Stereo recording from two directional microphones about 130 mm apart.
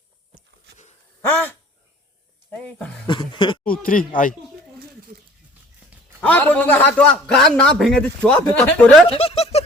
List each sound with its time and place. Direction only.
1.3 s a man's voice: 15° left (ahead or behind)
2.5 s a sound: 10° left (ahead or behind)
3.1 s speech: 35° left (ahead or behind)
3.6 s a sound: 90° left
6.2 s a man's voice: 10° left (ahead or behind)
9.0 s speech: 50° left (ahead or behind)